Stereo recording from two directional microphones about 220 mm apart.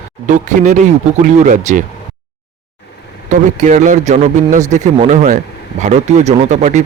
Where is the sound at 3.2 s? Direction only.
35° right (ahead or behind).